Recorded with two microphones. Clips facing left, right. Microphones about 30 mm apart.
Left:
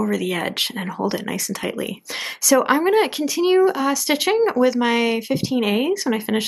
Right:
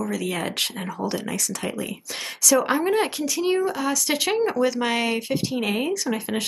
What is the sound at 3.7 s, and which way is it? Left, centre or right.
Speech, centre.